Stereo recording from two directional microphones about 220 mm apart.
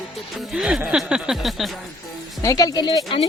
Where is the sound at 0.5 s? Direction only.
Centre (ahead or behind).